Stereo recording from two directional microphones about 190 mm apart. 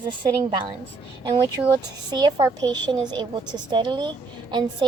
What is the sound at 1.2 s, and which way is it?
A woman's voice, 25° right (ahead or behind).